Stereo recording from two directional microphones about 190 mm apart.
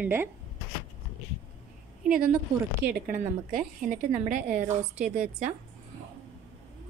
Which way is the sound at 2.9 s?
50° right (ahead or behind).